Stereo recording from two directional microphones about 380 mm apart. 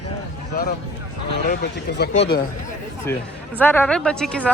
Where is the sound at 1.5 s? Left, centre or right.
Left.